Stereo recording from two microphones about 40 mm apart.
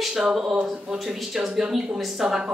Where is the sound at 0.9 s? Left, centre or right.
Centre.